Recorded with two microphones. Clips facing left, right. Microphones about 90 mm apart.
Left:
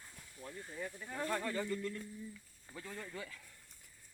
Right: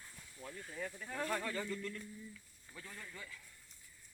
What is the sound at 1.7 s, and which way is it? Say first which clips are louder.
Speech: left 3 dB; 25° left (ahead or behind).